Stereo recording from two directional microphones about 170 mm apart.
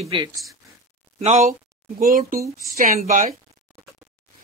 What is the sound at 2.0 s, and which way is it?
A woman's voice, 55° right (ahead or behind).